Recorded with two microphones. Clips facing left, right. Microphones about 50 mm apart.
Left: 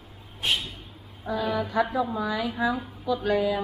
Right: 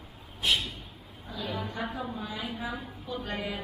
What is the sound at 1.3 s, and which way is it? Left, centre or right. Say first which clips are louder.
Speech: left 9 dB; left.